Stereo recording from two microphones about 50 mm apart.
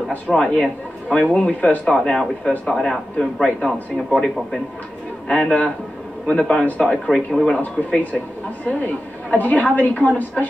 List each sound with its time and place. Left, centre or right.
0.3 s speech: centre
1.9 s speech: centre
5.3 s speech: left
6.2 s speech: centre
7.5 s a woman's voice: left